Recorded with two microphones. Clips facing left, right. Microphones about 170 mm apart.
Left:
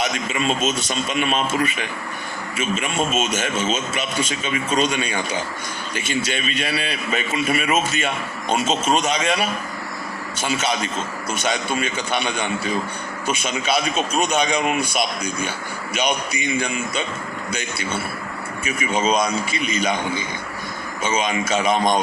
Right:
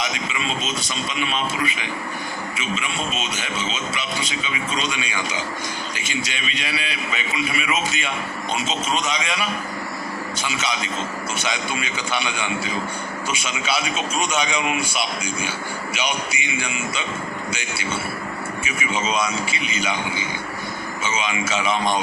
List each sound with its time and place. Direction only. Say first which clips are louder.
0.0 s a man's voice: left 4 dB; 45° left (ahead or behind)
18.6 s a man's voice: left 5 dB; 40° left (ahead or behind)
21.1 s a man's voice: left 4 dB; 40° left (ahead or behind)